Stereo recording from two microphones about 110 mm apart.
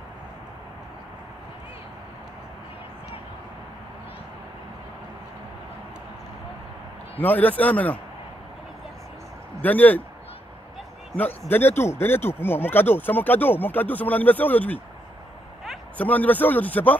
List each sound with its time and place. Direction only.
7.2 s speech: 15° left (ahead or behind)
9.6 s speech: 15° left (ahead or behind)
11.1 s speech: 15° left (ahead or behind)
16.0 s speech: 15° left (ahead or behind)